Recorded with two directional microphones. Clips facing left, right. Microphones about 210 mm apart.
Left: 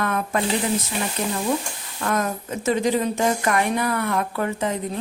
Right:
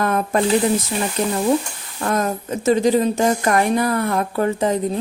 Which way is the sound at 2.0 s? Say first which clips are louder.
Right 3 dB; 35° right (ahead or behind).